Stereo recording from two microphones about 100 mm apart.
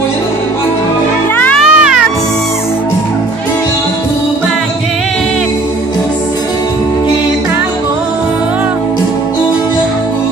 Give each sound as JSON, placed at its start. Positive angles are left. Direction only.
{"t": 1.3, "sound": "music", "side_deg": 15}
{"t": 1.6, "sound": "music", "side_deg": -5}